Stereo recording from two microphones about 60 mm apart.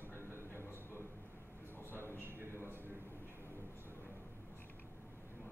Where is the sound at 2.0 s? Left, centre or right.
Left.